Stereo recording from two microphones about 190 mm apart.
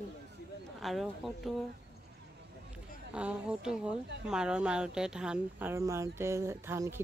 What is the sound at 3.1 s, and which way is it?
A woman's voice, 5° right (ahead or behind).